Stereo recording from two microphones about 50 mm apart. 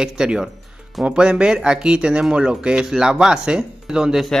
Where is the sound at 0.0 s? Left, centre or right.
Centre.